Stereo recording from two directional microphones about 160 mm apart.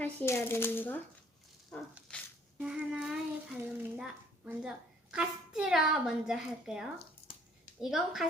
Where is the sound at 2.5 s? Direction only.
5° right (ahead or behind).